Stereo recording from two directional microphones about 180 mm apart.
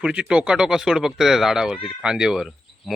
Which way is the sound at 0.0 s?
5° right (ahead or behind).